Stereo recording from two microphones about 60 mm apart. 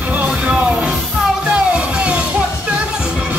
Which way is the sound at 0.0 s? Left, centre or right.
Right.